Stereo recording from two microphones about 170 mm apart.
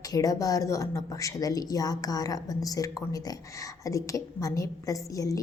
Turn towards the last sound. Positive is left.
turn(degrees=20)  # may be behind; listen again after turning